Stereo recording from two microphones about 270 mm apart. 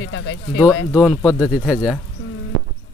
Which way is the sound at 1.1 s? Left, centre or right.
Centre.